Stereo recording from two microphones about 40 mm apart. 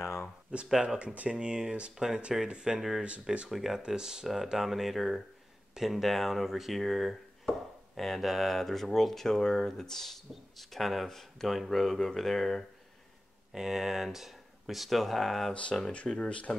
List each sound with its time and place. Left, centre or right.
0.5 s speech: right
1.3 s speech: right
3.4 s speech: centre
3.8 s speech: centre
13.5 s speech: centre
16.1 s speech: left